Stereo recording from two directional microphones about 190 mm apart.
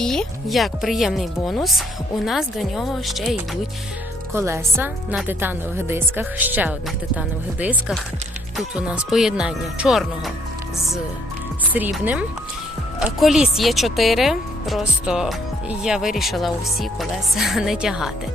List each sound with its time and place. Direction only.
0.0 s speech: centre (ahead or behind)
4.4 s speech: 15° right (ahead or behind)
11.6 s speech: 10° right (ahead or behind)